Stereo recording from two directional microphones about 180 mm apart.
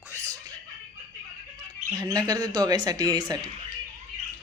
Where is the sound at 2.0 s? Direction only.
20° right (ahead or behind).